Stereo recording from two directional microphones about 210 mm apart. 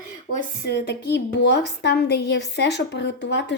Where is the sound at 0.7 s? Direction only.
55° left (ahead or behind).